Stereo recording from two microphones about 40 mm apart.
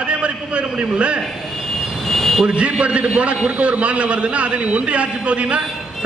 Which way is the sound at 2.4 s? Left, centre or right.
Right.